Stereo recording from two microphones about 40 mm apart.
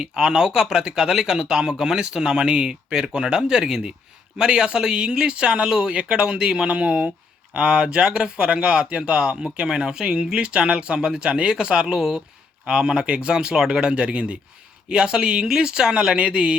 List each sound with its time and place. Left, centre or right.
0.1 s speech: centre
6.7 s speech: right